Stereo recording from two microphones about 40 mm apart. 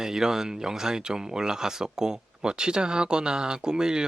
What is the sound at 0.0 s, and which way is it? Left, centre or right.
Speech, centre.